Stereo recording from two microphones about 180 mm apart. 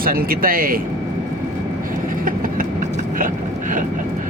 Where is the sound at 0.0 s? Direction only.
55° right (ahead or behind).